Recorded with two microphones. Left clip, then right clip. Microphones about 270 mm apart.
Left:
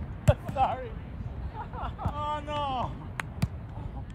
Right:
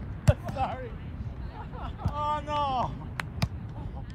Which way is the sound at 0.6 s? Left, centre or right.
Left.